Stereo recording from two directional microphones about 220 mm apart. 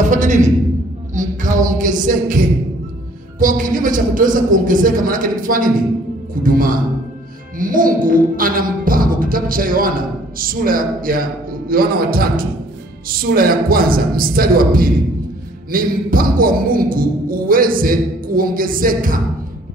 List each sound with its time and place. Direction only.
0.1 s speech: 35° right (ahead or behind)
1.1 s a sound: 35° right (ahead or behind)
3.3 s speech: 35° right (ahead or behind)
7.5 s music: 40° right (ahead or behind)
13.1 s speech: 40° right (ahead or behind)